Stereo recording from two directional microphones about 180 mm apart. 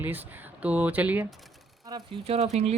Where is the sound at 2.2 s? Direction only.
35° right (ahead or behind).